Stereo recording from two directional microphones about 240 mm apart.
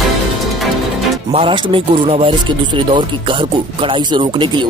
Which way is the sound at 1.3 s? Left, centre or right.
Right.